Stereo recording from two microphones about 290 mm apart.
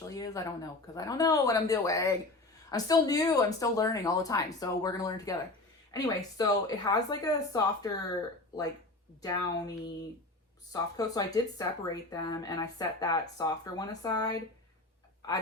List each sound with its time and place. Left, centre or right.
0.1 s speech: centre
9.2 s speech: centre